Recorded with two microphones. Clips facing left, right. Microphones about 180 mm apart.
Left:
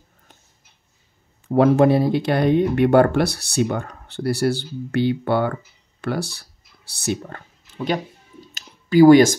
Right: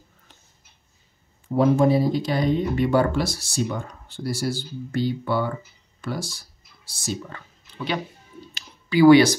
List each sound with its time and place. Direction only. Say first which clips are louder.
1.5 s speech: left 3 dB; 65° left (ahead or behind)
7.2 s speech: left 1 dB; 50° left (ahead or behind)
8.5 s a sound: left 6 dB; 45° left (ahead or behind)